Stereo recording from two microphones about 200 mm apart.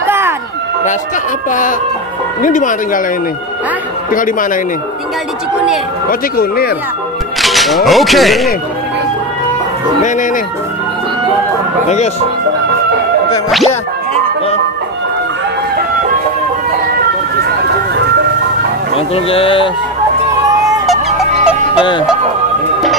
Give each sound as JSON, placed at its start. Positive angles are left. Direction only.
{"t": 0.0, "sound": "a sound", "side_deg": -10}
{"t": 1.5, "sound": "speech", "side_deg": 40}
{"t": 4.1, "sound": "speech", "side_deg": 40}
{"t": 6.0, "sound": "speech", "side_deg": 50}
{"t": 7.4, "sound": "speech", "side_deg": 0}
{"t": 11.9, "sound": "speech", "side_deg": 35}
{"t": 18.9, "sound": "speech", "side_deg": 30}
{"t": 20.8, "sound": "fowl", "side_deg": 0}